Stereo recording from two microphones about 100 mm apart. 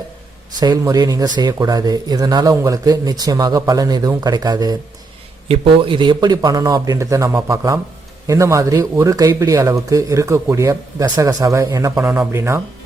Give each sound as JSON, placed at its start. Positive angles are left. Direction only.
{"t": 0.6, "sound": "speech", "side_deg": -40}
{"t": 5.5, "sound": "speech", "side_deg": -60}